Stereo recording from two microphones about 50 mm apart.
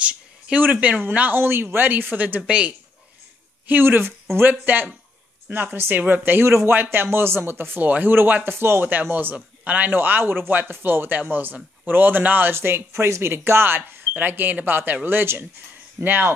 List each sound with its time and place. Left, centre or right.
0.6 s speech: right
1.4 s speech: right
2.4 s speech: right
3.6 s speech: right
4.5 s speech: right
6.4 s a man's voice: right
6.7 s speech: right
7.8 s speech: right
9.1 s speech: right
12.5 s speech: right